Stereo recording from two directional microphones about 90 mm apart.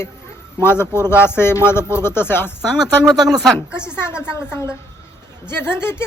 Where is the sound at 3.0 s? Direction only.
45° right (ahead or behind).